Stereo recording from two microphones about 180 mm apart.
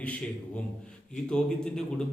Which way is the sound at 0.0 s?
5° left (ahead or behind).